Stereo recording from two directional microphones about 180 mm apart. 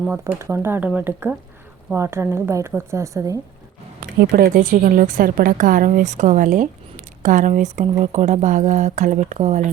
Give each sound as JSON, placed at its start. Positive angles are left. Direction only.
{"t": 0.0, "sound": "a woman's voice", "side_deg": -10}
{"t": 4.2, "sound": "a woman's voice", "side_deg": -55}